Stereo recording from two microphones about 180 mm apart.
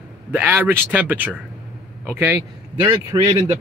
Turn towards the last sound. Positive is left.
turn(degrees=-30)  # may be behind; listen again after turning